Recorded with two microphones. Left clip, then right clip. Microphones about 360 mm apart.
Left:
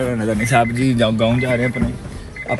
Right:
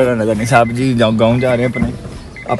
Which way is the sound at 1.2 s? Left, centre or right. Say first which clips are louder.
Right 5 dB; centre.